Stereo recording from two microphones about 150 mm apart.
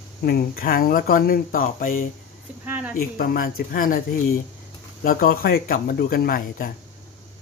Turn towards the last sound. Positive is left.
turn(degrees=80)